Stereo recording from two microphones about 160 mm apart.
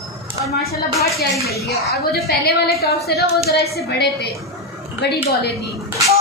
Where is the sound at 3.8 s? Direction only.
90° left.